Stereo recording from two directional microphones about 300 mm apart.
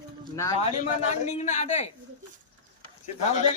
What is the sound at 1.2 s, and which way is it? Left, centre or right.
Speech, left.